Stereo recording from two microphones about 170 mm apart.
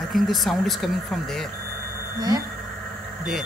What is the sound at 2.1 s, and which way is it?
Speech, 25° right (ahead or behind).